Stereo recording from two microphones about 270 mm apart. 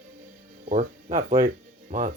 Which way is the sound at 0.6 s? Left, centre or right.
Right.